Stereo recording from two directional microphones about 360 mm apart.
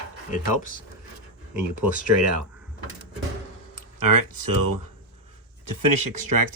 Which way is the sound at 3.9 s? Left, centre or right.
Right.